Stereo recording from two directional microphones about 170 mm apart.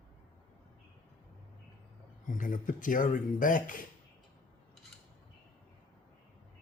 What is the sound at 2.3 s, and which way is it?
Speech, 50° left (ahead or behind).